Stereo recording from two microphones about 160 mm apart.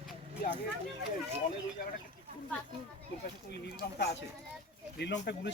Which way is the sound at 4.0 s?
90° left.